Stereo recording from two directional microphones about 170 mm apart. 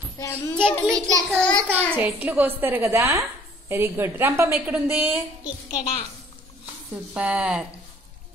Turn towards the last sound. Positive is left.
turn(degrees=-5)  # may be behind; listen again after turning